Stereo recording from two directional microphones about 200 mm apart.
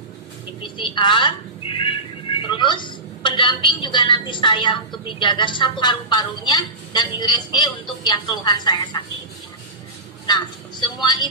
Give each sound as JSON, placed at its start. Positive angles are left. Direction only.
{"t": 0.6, "sound": "a sound", "side_deg": 25}
{"t": 2.4, "sound": "a woman's voice", "side_deg": 25}
{"t": 10.2, "sound": "a woman's voice", "side_deg": 20}